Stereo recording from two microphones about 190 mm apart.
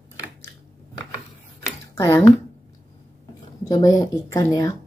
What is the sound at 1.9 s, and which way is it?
Speech, 15° left (ahead or behind).